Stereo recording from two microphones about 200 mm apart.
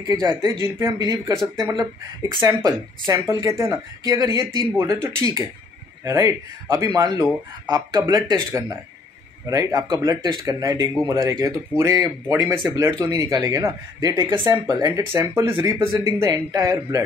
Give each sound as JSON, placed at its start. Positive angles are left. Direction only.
{"t": 0.0, "sound": "speech", "side_deg": -20}